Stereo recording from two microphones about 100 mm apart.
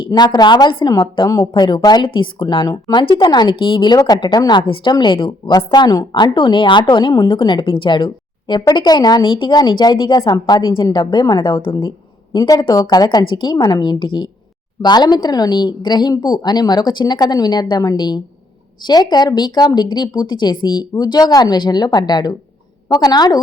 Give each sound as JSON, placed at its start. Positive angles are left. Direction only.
{"t": 0.1, "sound": "a woman's voice", "side_deg": 45}
{"t": 1.3, "sound": "a woman's voice", "side_deg": 35}
{"t": 2.6, "sound": "a woman's voice", "side_deg": 40}
{"t": 3.0, "sound": "a woman's voice", "side_deg": 50}
{"t": 3.9, "sound": "a woman's voice", "side_deg": 40}